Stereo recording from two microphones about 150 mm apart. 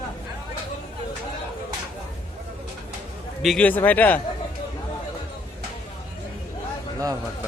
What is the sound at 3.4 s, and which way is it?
Speech, centre (ahead or behind).